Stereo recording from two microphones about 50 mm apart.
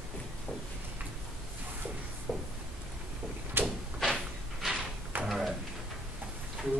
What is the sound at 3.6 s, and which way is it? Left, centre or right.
Door, right.